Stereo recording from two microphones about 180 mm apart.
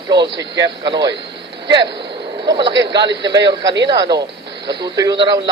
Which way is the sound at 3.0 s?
75° right (ahead or behind).